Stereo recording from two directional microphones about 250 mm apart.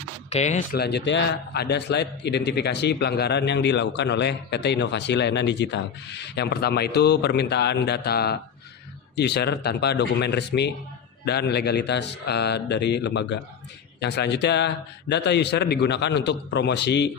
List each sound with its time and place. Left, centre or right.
0.3 s speech: left
0.8 s a man's voice: left